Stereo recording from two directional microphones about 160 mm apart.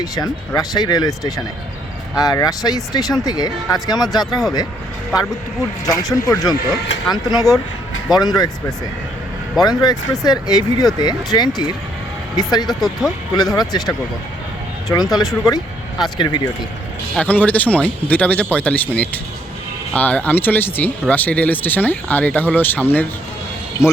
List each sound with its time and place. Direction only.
0.0 s speech: 25° left (ahead or behind)
6.1 s speech: 20° left (ahead or behind)
9.6 s speech: 25° left (ahead or behind)
12.6 s speech: centre (ahead or behind)
13.6 s speech: 25° left (ahead or behind)
15.1 s speech: centre (ahead or behind)
15.4 s vehicle: 25° left (ahead or behind)
16.1 s speech: 30° left (ahead or behind)
17.2 s speech: 10° left (ahead or behind)